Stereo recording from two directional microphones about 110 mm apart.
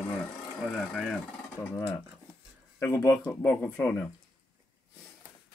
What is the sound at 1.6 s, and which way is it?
Speech, 30° left (ahead or behind).